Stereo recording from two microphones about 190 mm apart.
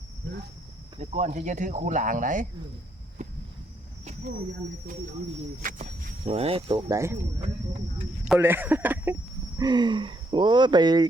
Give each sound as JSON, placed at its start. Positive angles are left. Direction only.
{"t": 0.9, "sound": "speech", "side_deg": -35}
{"t": 3.2, "sound": "a sound", "side_deg": -40}
{"t": 5.6, "sound": "speech", "side_deg": -35}
{"t": 6.8, "sound": "speech", "side_deg": -15}
{"t": 8.3, "sound": "speech", "side_deg": -10}
{"t": 9.6, "sound": "speech", "side_deg": -20}